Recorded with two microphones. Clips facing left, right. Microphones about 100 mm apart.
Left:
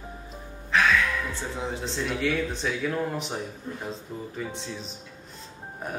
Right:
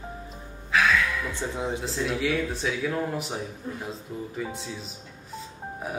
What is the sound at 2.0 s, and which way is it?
Speech, 5° right (ahead or behind).